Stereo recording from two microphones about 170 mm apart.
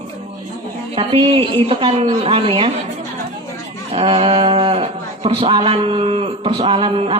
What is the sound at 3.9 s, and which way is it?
Speech, 30° right (ahead or behind).